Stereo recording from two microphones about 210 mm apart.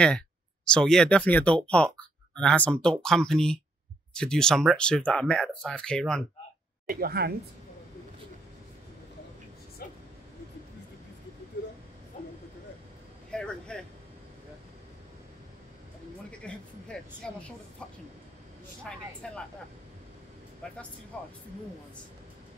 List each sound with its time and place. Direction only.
0.7 s speech: 5° left (ahead or behind)
6.9 s a woman's voice: 45° right (ahead or behind)
12.1 s vehicle: 35° left (ahead or behind)
13.3 s vehicle: 5° left (ahead or behind)
16.3 s a sound: 5° left (ahead or behind)
18.9 s speech: 5° left (ahead or behind)
20.6 s speech: 5° left (ahead or behind)